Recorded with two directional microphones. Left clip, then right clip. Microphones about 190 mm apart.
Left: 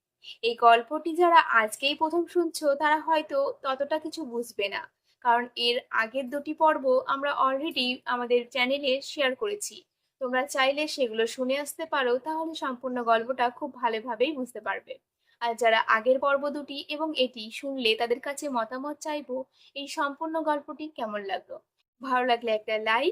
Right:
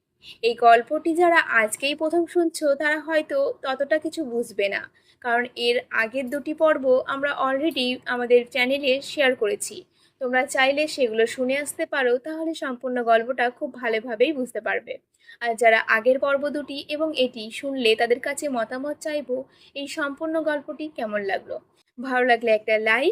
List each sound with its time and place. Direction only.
0.4 s a woman's voice: 10° right (ahead or behind)